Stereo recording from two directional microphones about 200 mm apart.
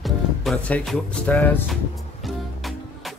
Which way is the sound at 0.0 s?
Centre (ahead or behind).